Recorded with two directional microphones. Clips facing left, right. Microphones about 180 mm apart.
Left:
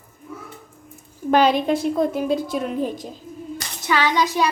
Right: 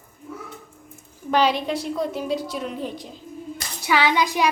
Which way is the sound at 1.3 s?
50° left (ahead or behind).